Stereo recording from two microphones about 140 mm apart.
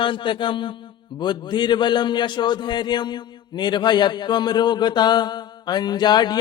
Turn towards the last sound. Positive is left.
turn(degrees=30)  # may be behind; listen again after turning